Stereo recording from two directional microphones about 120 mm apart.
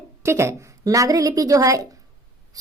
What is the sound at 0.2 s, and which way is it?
Speech, 20° right (ahead or behind).